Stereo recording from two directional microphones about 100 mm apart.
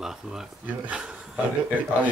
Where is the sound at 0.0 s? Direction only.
5° right (ahead or behind).